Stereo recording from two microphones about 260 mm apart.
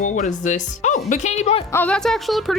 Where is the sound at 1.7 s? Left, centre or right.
Centre.